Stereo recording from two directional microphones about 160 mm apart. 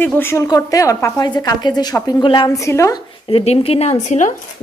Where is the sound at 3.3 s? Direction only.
35° left (ahead or behind).